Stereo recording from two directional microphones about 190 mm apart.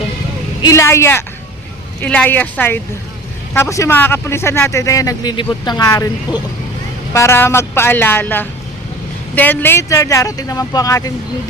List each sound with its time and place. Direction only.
0.6 s a man's voice: 15° left (ahead or behind)